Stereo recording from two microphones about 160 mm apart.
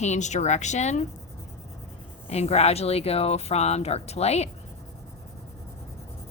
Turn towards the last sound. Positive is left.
turn(degrees=40)  # may be behind; listen again after turning